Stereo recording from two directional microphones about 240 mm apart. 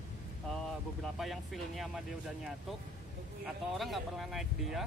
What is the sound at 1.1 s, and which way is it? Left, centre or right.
Speech, centre.